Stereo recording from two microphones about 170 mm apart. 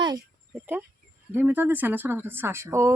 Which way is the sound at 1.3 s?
10° right (ahead or behind).